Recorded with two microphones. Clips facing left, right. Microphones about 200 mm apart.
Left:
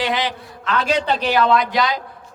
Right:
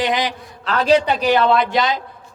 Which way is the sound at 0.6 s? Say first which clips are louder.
Right 5 dB; 35° right (ahead or behind).